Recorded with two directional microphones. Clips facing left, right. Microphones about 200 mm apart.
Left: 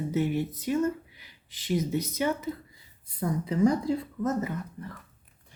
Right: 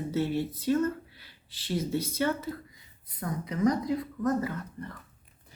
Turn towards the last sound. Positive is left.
turn(degrees=25)  # may be behind; listen again after turning